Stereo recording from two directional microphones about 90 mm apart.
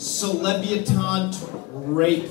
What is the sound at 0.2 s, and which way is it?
A man's voice, 5° left (ahead or behind).